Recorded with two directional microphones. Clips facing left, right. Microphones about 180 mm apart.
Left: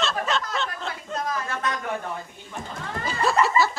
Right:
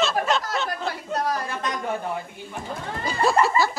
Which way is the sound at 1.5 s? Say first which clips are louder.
Left 1 dB; 15° right (ahead or behind).